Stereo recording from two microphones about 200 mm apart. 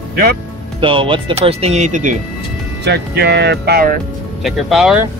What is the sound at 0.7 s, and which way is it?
Speech, 25° right (ahead or behind).